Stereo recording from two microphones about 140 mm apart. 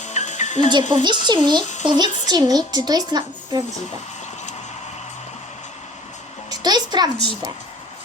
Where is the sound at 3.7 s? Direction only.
55° left (ahead or behind).